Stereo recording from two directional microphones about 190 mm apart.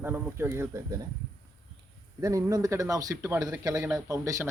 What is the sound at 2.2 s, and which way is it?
Speech, 15° right (ahead or behind).